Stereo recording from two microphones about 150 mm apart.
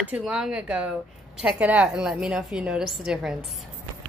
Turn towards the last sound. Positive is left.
turn(degrees=-5)  # may be behind; listen again after turning